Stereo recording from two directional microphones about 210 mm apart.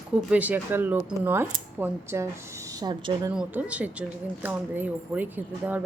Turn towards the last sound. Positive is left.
turn(degrees=-10)  # may be behind; listen again after turning